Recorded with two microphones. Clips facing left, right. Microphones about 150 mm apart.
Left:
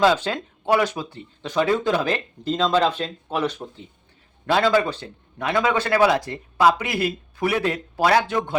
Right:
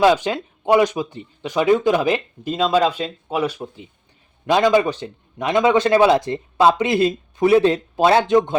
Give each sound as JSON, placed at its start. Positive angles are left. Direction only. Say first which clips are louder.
{"t": 0.0, "sound": "a man's voice", "louder": "right 3 dB", "side_deg": -15}